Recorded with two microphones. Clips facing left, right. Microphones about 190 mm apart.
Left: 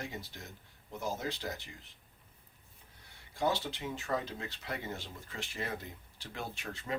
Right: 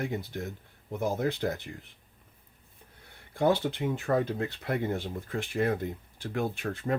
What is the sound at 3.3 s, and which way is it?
Speech, 55° right (ahead or behind).